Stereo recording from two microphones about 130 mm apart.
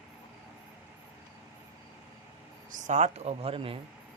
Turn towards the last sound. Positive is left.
turn(degrees=-45)  # may be behind; listen again after turning